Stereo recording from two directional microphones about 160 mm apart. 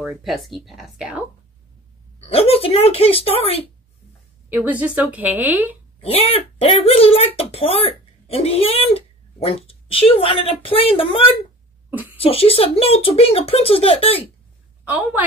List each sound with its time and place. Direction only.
0.0 s speech: centre (ahead or behind)
2.1 s speech: 35° left (ahead or behind)
4.6 s a woman's voice: 10° right (ahead or behind)
5.9 s speech: 35° left (ahead or behind)
11.9 s a sound: 10° right (ahead or behind)
12.2 s speech: 35° left (ahead or behind)